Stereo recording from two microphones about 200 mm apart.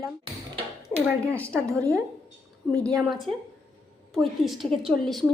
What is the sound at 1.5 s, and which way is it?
Speech, 15° right (ahead or behind).